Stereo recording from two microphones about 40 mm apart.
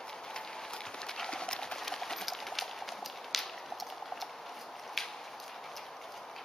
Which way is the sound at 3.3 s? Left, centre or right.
Centre.